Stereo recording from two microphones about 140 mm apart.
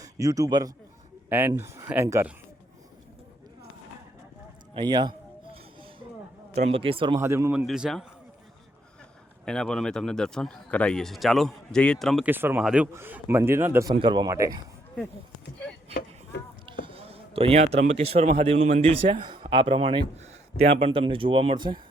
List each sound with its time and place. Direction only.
0.0 s a man's voice: 25° right (ahead or behind)
1.3 s a man's voice: 15° right (ahead or behind)
4.7 s a man's voice: 30° right (ahead or behind)
6.5 s speech: 45° right (ahead or behind)
7.2 s speech: 20° right (ahead or behind)
7.5 s speech: 5° right (ahead or behind)
9.5 s speech: 5° left (ahead or behind)
12.2 s a man's voice: 15° right (ahead or behind)
13.9 s speech: 35° right (ahead or behind)
16.8 s speech: 40° right (ahead or behind)
20.8 s speech: 40° right (ahead or behind)